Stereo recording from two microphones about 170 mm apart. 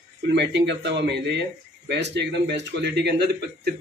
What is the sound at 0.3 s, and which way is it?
Speech, 90° right.